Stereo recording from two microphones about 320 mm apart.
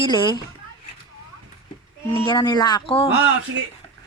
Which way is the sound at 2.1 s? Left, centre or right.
Centre.